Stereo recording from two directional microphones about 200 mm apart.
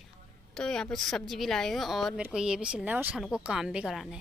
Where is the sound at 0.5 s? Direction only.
5° left (ahead or behind).